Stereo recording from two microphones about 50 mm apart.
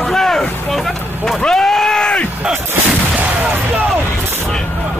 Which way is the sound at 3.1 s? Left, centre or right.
Right.